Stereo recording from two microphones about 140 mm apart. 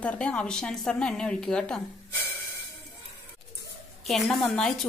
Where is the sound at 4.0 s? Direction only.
Centre (ahead or behind).